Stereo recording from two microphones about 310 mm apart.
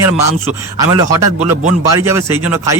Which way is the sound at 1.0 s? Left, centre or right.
Centre.